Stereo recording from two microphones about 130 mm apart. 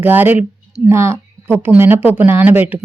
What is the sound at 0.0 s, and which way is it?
A woman's voice, 15° right (ahead or behind).